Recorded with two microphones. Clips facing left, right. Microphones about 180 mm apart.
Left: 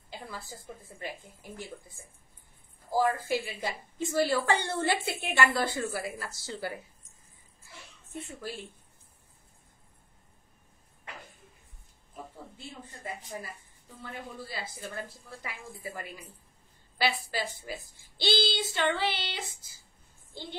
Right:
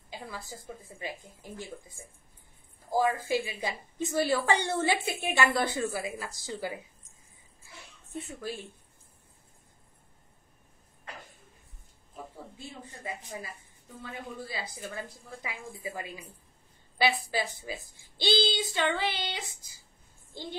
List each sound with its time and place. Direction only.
0.1 s a woman's voice: 15° right (ahead or behind)
8.3 s a woman's voice: 15° right (ahead or behind)
12.5 s a sound: 15° right (ahead or behind)
14.4 s a woman's voice: 15° right (ahead or behind)